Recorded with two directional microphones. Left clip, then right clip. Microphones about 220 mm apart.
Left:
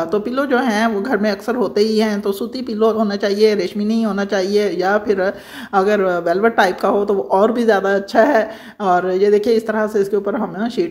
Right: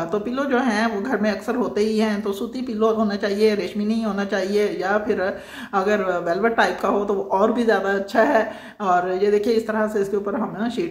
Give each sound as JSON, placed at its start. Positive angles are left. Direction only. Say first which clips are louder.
{"t": 0.1, "sound": "speech", "louder": "left 3 dB", "side_deg": 30}